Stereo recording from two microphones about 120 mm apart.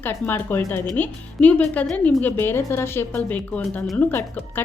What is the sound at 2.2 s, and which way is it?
A woman's voice, 20° left (ahead or behind).